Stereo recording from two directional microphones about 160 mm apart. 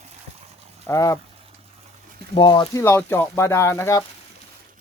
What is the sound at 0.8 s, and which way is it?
Speech, 20° left (ahead or behind).